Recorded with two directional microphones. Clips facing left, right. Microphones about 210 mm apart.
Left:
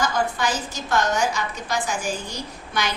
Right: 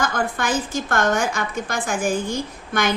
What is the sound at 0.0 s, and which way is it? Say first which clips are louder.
A woman's voice: even; 55° right (ahead or behind).